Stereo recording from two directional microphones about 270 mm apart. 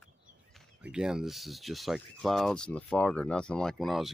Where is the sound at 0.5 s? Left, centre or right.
Centre.